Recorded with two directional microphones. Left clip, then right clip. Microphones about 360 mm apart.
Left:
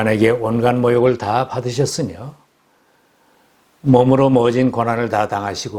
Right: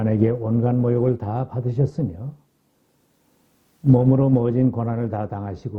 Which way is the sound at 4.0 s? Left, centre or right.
Centre.